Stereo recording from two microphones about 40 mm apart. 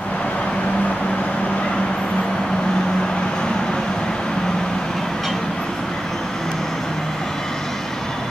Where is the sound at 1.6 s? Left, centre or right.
Left; by 5.4 s centre.